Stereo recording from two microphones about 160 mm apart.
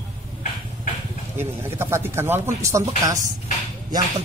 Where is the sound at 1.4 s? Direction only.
15° right (ahead or behind).